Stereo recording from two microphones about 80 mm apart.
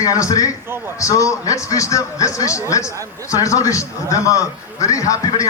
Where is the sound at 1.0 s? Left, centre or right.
Left.